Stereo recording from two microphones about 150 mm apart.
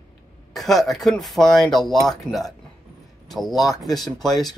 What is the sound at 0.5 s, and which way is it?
Speech, centre (ahead or behind).